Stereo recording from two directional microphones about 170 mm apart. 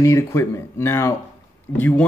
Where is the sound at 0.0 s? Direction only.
15° left (ahead or behind).